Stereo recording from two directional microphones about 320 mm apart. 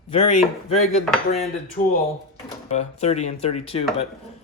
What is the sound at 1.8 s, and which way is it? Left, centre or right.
Speech, left.